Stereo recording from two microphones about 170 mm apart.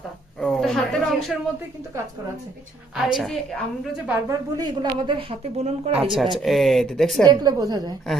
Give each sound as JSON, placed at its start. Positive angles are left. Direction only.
{"t": 0.3, "sound": "speech", "side_deg": 0}
{"t": 2.9, "sound": "a woman's voice", "side_deg": 0}
{"t": 4.3, "sound": "speech", "side_deg": -25}
{"t": 6.3, "sound": "a woman's voice", "side_deg": 0}
{"t": 7.3, "sound": "a woman's voice", "side_deg": -25}